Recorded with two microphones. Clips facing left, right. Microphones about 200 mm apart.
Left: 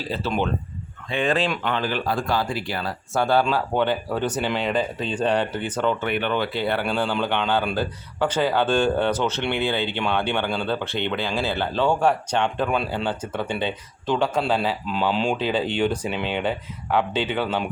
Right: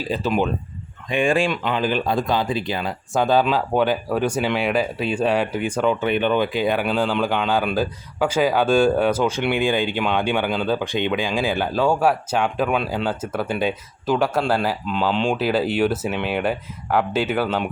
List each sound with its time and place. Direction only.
0.1 s speech: 15° right (ahead or behind)